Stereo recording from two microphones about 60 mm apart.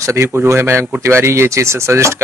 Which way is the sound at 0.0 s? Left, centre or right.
Right.